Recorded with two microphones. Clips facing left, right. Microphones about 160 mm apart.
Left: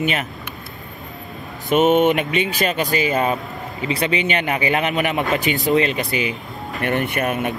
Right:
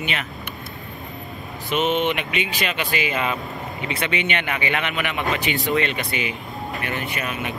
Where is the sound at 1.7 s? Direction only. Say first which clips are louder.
Left 7 dB; 45° left (ahead or behind).